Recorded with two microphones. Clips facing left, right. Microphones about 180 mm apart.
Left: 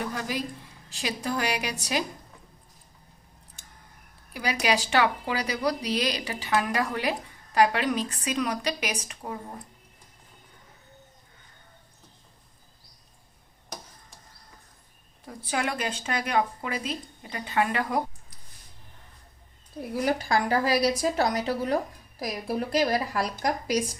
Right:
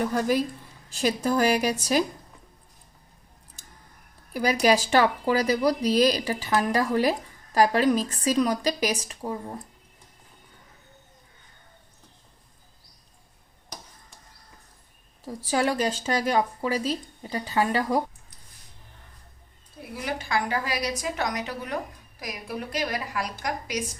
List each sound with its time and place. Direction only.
0.1 s a woman's voice: 45° right (ahead or behind)
4.6 s a woman's voice: 40° right (ahead or behind)
15.4 s a woman's voice: 35° right (ahead or behind)
19.8 s a woman's voice: 40° left (ahead or behind)